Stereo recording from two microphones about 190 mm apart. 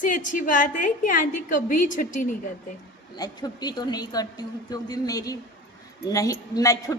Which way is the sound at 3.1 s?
20° left (ahead or behind).